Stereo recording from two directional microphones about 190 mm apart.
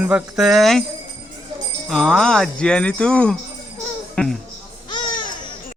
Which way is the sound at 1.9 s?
5° left (ahead or behind).